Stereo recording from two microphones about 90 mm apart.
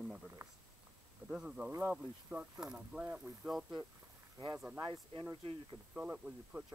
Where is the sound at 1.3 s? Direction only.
10° right (ahead or behind).